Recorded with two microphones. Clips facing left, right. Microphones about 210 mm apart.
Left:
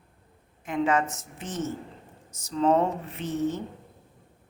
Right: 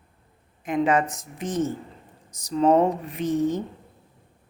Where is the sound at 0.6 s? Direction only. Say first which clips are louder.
Right 3 dB; 15° right (ahead or behind).